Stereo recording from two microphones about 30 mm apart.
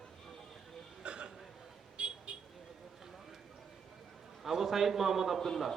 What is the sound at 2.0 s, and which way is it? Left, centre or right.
Vehicle, right.